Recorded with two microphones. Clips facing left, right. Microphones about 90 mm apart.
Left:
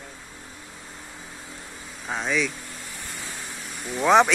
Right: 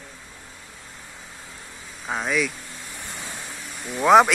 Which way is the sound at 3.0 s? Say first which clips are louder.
Right 2 dB; 20° right (ahead or behind).